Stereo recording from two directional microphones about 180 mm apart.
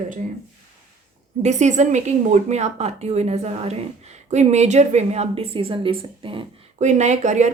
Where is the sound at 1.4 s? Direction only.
40° right (ahead or behind).